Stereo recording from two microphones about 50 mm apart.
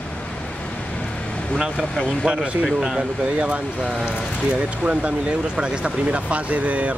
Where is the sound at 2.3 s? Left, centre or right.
Right.